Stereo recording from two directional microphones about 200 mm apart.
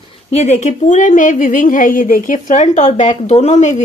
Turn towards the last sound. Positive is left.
turn(degrees=35)  # may be behind; listen again after turning